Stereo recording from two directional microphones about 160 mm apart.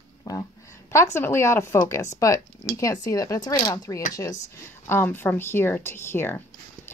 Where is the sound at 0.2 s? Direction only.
25° left (ahead or behind).